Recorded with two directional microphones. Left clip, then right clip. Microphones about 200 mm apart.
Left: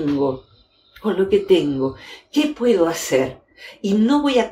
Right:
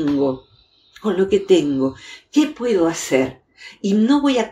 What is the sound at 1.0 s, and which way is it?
Speech, 40° right (ahead or behind).